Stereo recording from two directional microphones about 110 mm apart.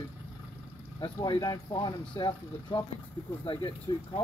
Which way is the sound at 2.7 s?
50° left (ahead or behind).